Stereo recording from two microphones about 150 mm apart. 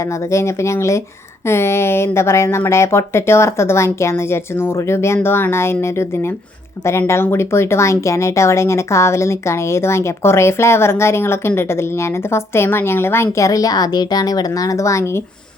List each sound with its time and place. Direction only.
0.0 s speech: 20° left (ahead or behind)